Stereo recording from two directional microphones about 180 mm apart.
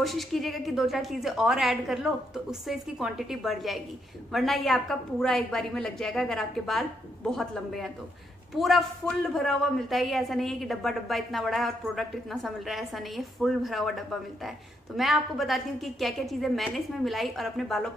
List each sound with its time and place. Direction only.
0.0 s a woman's voice: centre (ahead or behind)